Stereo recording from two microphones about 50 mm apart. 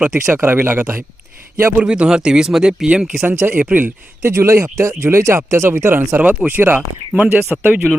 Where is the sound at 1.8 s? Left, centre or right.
Right.